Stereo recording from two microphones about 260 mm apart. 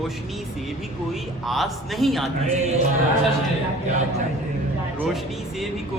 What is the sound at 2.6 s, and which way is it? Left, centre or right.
Music, right.